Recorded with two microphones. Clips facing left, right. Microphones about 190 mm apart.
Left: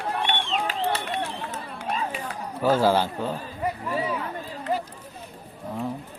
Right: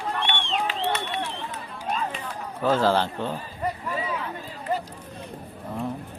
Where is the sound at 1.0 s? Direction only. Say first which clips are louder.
Left 1 dB; 45° left (ahead or behind).